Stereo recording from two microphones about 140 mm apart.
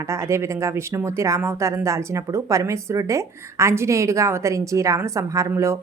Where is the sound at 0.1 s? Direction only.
20° right (ahead or behind).